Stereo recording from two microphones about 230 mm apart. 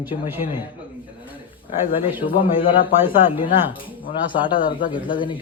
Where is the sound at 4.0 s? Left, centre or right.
Left.